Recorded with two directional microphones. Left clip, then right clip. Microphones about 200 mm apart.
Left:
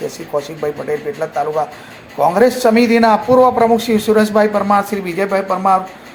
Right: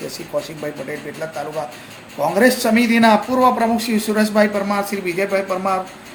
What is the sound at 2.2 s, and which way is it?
Speech, 20° left (ahead or behind).